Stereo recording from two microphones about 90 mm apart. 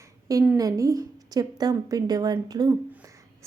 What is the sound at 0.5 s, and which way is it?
A woman's voice, 40° right (ahead or behind).